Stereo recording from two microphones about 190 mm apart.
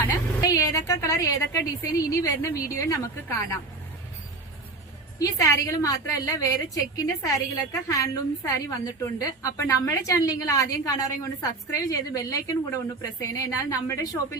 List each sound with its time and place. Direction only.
0.0 s a woman's voice: 15° left (ahead or behind)
5.2 s a woman's voice: 15° left (ahead or behind)